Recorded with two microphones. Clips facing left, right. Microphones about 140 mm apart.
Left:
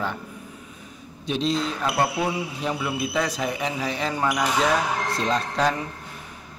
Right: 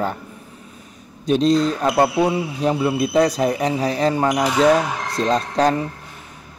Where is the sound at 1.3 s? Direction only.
40° right (ahead or behind).